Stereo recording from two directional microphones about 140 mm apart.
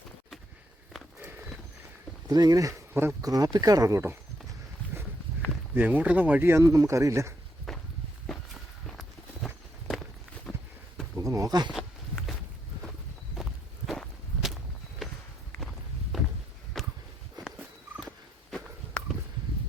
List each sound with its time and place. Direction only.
1.2 s horse: 15° right (ahead or behind)
2.3 s speech: 25° right (ahead or behind)
5.7 s speech: 10° right (ahead or behind)
7.7 s walk: centre (ahead or behind)
8.9 s walk: centre (ahead or behind)
11.2 s a sound: 25° right (ahead or behind)
11.7 s walk: centre (ahead or behind)
16.7 s a sound: centre (ahead or behind)
17.4 s walk: 5° right (ahead or behind)
18.5 s a sound: 5° left (ahead or behind)